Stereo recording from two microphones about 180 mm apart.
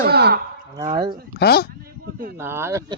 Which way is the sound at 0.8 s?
30° right (ahead or behind).